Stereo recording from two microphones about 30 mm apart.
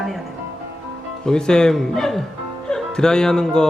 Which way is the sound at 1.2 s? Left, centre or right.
Left.